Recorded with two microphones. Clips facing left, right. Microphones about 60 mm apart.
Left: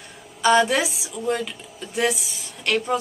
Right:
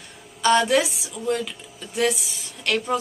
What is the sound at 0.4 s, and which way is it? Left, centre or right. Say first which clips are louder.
A woman's voice: left 1 dB; centre.